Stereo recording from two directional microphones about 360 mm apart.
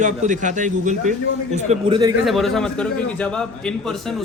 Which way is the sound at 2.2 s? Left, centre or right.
Centre.